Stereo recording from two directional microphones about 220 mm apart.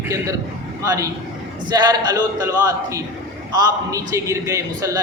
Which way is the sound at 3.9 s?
15° right (ahead or behind).